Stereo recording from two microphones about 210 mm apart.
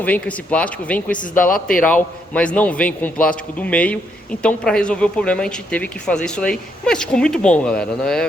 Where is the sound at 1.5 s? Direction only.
40° left (ahead or behind).